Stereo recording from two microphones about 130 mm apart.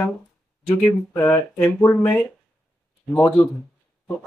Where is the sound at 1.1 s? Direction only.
15° left (ahead or behind).